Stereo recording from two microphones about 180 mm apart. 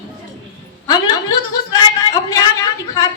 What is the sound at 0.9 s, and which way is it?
A woman's voice, 20° left (ahead or behind).